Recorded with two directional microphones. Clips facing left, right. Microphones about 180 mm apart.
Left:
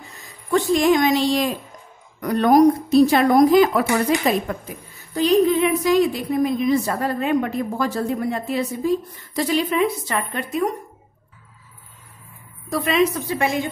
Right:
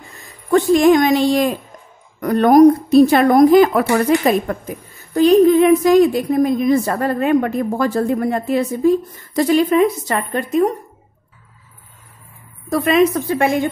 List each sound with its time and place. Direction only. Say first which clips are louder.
0.5 s a woman's voice: right 5 dB; 50° right (ahead or behind)
12.6 s a woman's voice: right 5 dB; 50° right (ahead or behind)